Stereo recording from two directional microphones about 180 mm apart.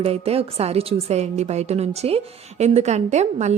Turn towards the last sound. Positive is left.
turn(degrees=-40)  # may be behind; listen again after turning